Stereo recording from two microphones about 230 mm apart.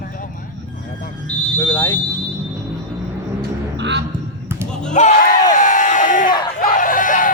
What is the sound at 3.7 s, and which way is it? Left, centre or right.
Music, right.